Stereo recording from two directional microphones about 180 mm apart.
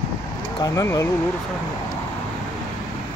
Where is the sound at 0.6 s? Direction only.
20° left (ahead or behind).